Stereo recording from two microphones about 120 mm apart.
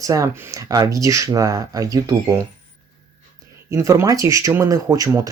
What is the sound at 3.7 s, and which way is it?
Speech, 25° right (ahead or behind).